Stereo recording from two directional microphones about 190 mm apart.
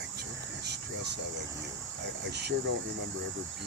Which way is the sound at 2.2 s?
60° right (ahead or behind).